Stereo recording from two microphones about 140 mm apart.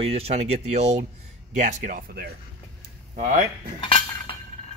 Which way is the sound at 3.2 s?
70° right (ahead or behind).